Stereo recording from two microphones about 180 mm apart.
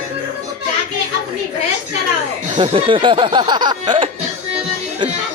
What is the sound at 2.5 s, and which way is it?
Music, 25° right (ahead or behind).